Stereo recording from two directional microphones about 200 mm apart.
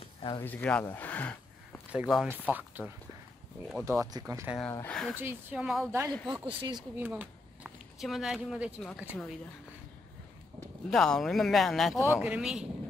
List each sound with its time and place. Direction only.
0.0 s a sound: 25° left (ahead or behind)
0.4 s speech: 10° left (ahead or behind)
1.9 s speech: 5° right (ahead or behind)
3.8 s speech: 15° right (ahead or behind)
4.6 s speech: 10° left (ahead or behind)
5.1 s speech: 10° right (ahead or behind)
5.9 s speech: 15° right (ahead or behind)
7.0 s speech: 10° right (ahead or behind)
10.9 s speech: centre (ahead or behind)